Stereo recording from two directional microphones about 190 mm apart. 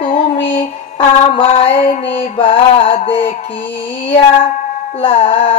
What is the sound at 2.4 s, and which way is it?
Music, 30° left (ahead or behind).